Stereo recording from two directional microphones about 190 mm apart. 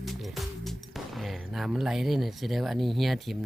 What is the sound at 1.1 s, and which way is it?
Speech, centre (ahead or behind).